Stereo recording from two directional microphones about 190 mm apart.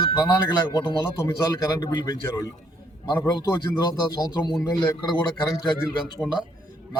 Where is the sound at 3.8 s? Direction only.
20° left (ahead or behind).